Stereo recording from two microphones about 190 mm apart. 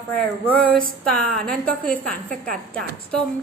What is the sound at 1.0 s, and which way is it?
A woman's voice, 5° left (ahead or behind).